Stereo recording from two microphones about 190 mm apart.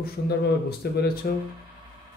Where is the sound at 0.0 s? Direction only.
60° left (ahead or behind).